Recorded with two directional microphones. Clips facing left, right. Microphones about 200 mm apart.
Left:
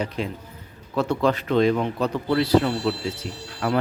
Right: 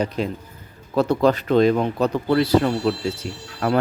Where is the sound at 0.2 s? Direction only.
40° right (ahead or behind).